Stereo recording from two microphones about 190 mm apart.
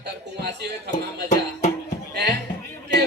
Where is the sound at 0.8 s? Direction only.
40° left (ahead or behind).